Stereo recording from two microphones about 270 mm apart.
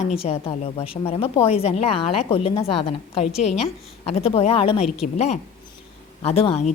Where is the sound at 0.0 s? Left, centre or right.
Left.